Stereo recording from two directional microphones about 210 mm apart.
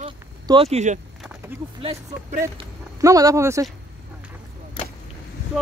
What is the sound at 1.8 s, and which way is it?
Speech, 25° right (ahead or behind).